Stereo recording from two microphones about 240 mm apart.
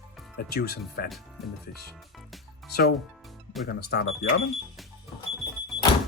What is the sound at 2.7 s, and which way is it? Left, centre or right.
Speech, left.